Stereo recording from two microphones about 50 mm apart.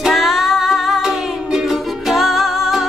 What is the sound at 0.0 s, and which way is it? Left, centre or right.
Music, centre.